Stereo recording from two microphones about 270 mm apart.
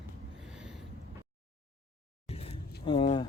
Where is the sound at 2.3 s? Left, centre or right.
Left.